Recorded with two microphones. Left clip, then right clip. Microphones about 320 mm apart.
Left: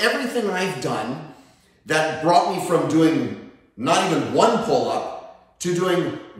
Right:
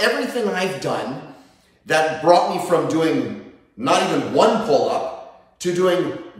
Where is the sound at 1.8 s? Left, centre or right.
Centre.